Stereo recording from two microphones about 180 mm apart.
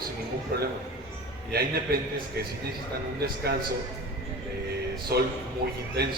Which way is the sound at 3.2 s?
60° right (ahead or behind).